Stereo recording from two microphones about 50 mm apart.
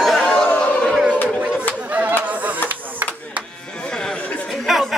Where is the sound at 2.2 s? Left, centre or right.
Right.